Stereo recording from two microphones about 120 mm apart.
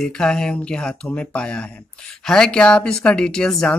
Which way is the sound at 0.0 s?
5° left (ahead or behind).